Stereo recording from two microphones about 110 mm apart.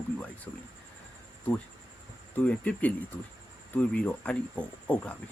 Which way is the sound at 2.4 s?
10° left (ahead or behind).